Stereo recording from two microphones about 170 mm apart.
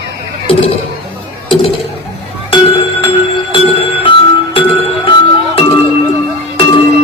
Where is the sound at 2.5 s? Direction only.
35° left (ahead or behind).